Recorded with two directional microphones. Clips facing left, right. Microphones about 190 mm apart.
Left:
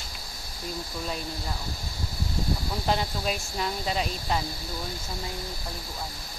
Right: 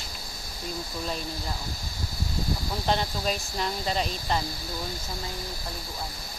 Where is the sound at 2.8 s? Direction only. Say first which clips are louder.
Right 1 dB; 5° left (ahead or behind).